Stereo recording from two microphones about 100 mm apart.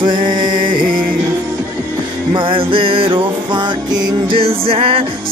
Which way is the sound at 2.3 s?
60° right (ahead or behind).